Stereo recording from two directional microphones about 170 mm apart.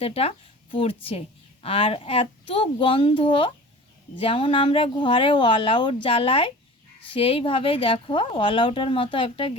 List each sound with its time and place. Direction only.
0.0 s a woman's voice: 35° left (ahead or behind)